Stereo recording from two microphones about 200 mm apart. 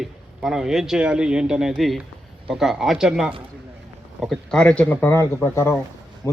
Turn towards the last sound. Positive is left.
turn(degrees=10)  # may be behind; listen again after turning